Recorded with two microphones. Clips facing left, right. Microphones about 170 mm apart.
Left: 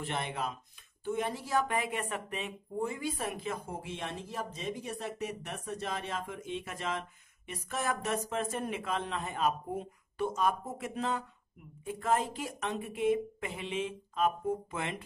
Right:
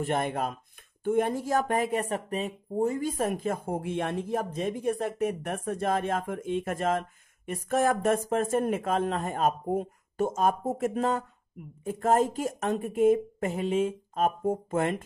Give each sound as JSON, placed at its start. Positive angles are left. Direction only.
{"t": 0.0, "sound": "speech", "side_deg": -50}